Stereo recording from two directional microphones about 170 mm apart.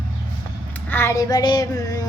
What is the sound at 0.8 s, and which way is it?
Child singing, 15° left (ahead or behind).